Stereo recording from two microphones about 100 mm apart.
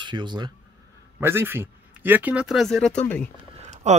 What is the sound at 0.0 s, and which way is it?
Speech, 50° right (ahead or behind).